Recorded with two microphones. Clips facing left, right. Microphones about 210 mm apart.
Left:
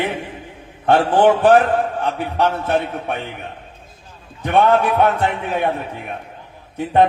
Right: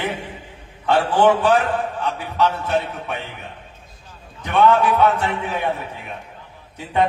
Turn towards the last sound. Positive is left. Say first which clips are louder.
# left 5 dB
turn(degrees=55)  # may be behind; listen again after turning